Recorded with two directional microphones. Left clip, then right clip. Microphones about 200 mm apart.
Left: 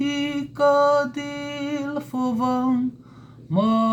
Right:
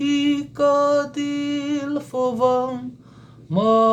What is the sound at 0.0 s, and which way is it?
Mantra, 35° right (ahead or behind).